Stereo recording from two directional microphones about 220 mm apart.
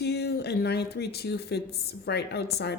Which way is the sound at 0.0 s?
50° left (ahead or behind).